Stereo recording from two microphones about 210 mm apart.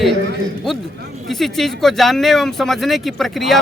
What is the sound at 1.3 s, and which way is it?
Speech, centre (ahead or behind).